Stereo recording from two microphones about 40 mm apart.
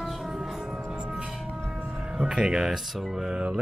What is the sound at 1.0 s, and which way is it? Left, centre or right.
Music, right.